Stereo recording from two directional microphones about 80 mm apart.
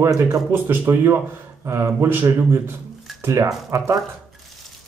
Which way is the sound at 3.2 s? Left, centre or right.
Right.